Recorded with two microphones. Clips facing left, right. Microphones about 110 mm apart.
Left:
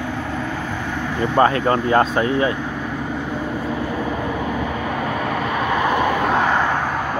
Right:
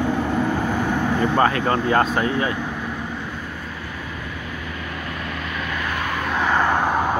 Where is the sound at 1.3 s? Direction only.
30° left (ahead or behind).